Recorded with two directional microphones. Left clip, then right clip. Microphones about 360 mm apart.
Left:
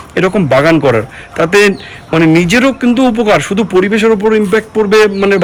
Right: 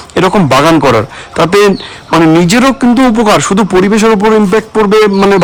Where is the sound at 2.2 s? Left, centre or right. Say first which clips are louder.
Right 1 dB; right.